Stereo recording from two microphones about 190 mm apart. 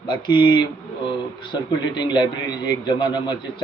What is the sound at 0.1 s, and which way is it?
Speech, 25° left (ahead or behind).